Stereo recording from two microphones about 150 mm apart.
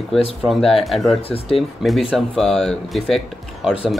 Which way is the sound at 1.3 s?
40° left (ahead or behind).